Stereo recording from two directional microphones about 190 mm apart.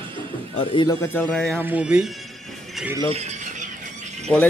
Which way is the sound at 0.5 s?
25° left (ahead or behind).